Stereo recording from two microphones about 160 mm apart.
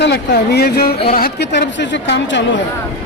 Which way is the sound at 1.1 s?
70° left (ahead or behind).